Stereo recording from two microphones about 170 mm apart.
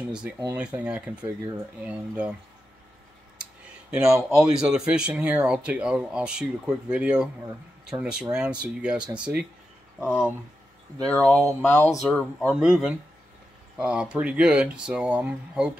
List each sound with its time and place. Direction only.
0.0 s a sound: 5° right (ahead or behind)
0.6 s speech: 5° right (ahead or behind)
3.9 s speech: 5° right (ahead or behind)
11.1 s speech: 10° left (ahead or behind)
12.0 s speech: 5° left (ahead or behind)